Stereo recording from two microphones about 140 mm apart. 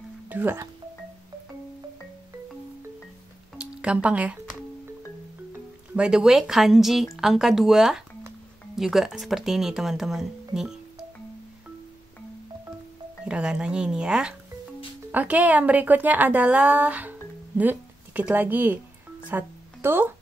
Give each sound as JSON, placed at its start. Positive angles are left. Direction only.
{"t": 0.3, "sound": "speech", "side_deg": -15}
{"t": 3.5, "sound": "music", "side_deg": -5}
{"t": 5.9, "sound": "speech", "side_deg": -5}
{"t": 13.2, "sound": "a woman's voice", "side_deg": -5}
{"t": 19.2, "sound": "music", "side_deg": -15}